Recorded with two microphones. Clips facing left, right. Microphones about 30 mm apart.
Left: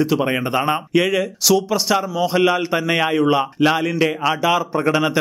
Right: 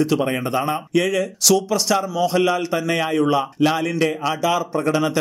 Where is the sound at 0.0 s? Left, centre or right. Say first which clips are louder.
Left 1 dB; centre.